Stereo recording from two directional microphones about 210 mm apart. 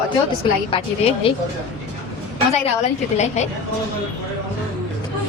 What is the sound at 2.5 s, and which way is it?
Speech, 30° left (ahead or behind).